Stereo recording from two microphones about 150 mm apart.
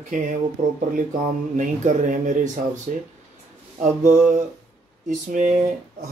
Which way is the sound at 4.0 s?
15° right (ahead or behind).